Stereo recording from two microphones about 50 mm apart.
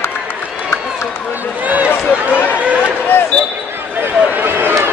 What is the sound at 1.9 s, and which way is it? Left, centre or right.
Run, left.